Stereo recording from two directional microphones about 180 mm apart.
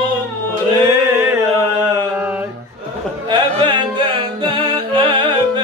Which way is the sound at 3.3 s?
25° right (ahead or behind).